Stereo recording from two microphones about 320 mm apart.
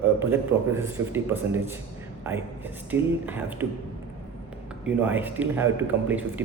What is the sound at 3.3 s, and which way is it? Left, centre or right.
Speech, centre.